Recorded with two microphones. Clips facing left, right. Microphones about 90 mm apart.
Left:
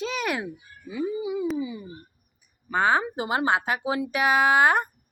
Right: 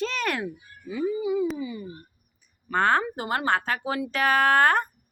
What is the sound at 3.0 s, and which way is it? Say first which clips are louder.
Speech: left 2 dB; 20° left (ahead or behind).